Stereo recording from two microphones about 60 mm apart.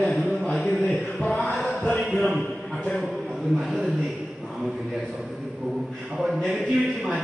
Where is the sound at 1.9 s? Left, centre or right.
Centre.